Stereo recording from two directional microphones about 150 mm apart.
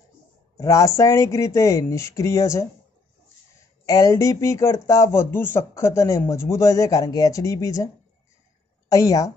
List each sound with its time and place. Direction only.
0.6 s speech: 20° left (ahead or behind)
3.8 s a woman's voice: 20° left (ahead or behind)